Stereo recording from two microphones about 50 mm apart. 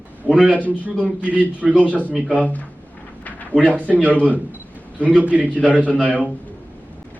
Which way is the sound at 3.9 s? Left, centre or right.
Right.